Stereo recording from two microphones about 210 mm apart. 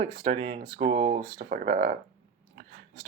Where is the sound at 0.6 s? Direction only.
40° right (ahead or behind).